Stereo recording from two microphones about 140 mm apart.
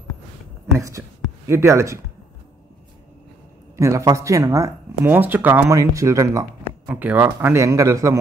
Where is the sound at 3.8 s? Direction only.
20° right (ahead or behind).